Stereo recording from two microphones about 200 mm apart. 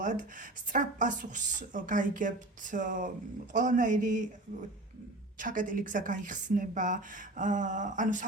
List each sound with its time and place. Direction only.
0.0 s speech: 40° right (ahead or behind)
5.4 s speech: 40° right (ahead or behind)